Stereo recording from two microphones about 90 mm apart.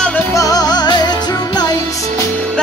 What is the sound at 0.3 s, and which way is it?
Music, 40° left (ahead or behind).